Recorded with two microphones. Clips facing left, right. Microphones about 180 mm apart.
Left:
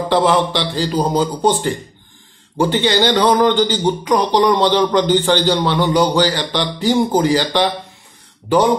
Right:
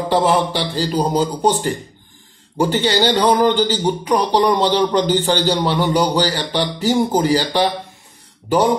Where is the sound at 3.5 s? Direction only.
10° right (ahead or behind).